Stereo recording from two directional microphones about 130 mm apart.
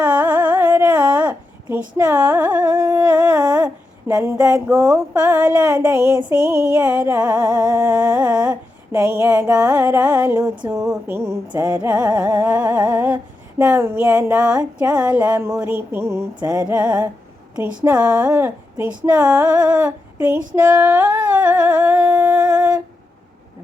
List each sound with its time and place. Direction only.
0.0 s carnatic music: 10° right (ahead or behind)
2.0 s music: 10° right (ahead or behind)
4.1 s a sound: 25° right (ahead or behind)
5.1 s music: 10° right (ahead or behind)
10.7 s a sound: 20° right (ahead or behind)
11.4 s music: 30° right (ahead or behind)
11.8 s music: 10° right (ahead or behind)
20.6 s humming: 10° right (ahead or behind)